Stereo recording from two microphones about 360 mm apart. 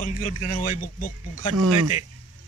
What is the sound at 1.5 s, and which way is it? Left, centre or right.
Speech, right.